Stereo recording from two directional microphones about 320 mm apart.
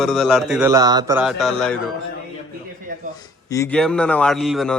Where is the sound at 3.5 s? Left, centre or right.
Centre.